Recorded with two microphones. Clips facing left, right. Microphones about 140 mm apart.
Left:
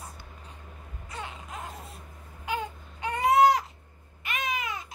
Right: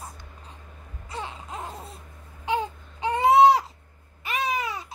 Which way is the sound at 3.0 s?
30° right (ahead or behind).